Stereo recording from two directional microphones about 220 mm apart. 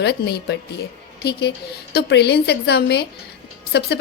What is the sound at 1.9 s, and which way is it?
A woman's voice, 50° left (ahead or behind).